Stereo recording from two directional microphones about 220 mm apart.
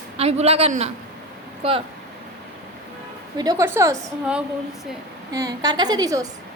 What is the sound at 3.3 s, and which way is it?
A woman's voice, 15° right (ahead or behind).